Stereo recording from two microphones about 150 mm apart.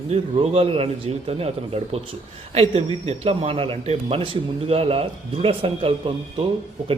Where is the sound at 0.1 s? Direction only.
40° right (ahead or behind).